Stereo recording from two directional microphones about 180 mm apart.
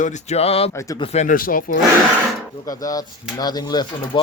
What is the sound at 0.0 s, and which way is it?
Speech, 40° left (ahead or behind).